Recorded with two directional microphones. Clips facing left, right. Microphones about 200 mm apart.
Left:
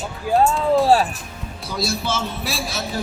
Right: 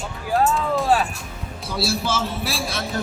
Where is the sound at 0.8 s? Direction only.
35° left (ahead or behind).